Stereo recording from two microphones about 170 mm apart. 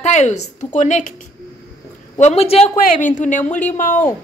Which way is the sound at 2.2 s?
40° left (ahead or behind).